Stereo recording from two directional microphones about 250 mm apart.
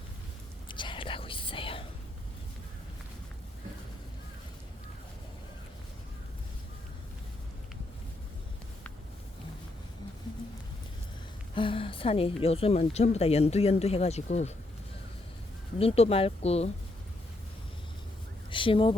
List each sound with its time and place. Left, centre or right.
0.7 s whispering: centre
11.5 s a woman's voice: left
15.8 s a woman's voice: left
18.5 s speech: centre